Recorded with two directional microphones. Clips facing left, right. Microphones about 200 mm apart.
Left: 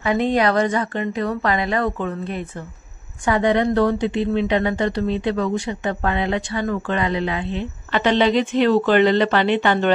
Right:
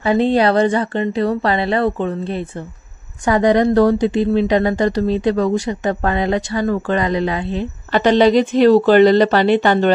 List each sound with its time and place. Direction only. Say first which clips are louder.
0.0 s a woman's voice: right 4 dB; 30° right (ahead or behind)